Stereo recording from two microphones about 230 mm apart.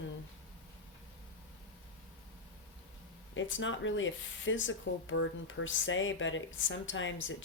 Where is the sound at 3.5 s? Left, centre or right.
Left.